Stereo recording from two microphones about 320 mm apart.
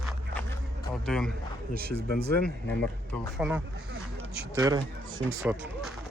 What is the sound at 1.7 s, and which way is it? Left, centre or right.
Speech, right.